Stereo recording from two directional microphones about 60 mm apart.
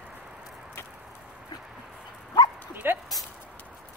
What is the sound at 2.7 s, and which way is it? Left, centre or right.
Dog, right.